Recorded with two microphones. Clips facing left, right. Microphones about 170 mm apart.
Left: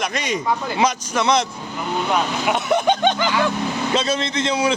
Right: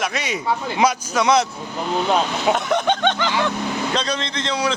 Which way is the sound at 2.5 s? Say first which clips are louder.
Left 1 dB; 10° left (ahead or behind).